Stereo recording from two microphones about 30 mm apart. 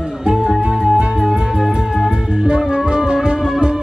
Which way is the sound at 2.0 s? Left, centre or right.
Right.